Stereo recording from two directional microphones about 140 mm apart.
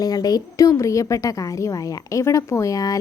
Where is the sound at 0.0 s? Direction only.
30° left (ahead or behind).